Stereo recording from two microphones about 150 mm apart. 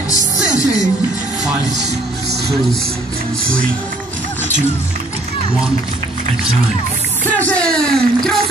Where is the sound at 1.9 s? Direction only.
90° right.